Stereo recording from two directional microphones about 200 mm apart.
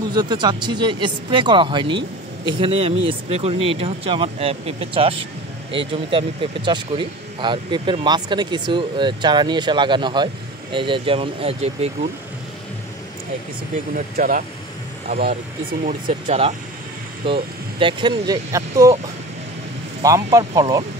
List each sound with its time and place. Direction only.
0.1 s speech: 20° right (ahead or behind)
13.9 s speech: 45° right (ahead or behind)
15.8 s speech: 35° right (ahead or behind); by 18.9 s 15° right (ahead or behind)
20.0 s speech: 15° right (ahead or behind)